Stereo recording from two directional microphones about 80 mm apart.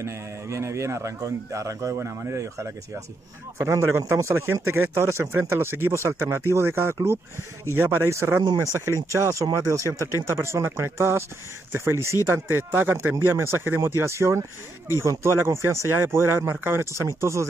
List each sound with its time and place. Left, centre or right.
0.0 s speech: right